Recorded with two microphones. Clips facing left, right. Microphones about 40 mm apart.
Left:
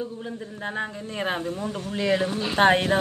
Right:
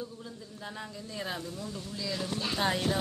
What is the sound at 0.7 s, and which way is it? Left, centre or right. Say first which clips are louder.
A man's voice: left 10 dB; left.